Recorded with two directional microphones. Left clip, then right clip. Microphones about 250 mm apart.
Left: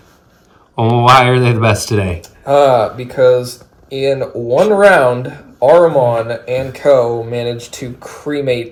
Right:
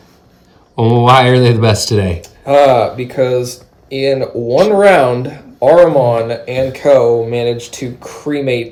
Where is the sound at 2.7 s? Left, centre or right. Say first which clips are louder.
Right 1 dB; right.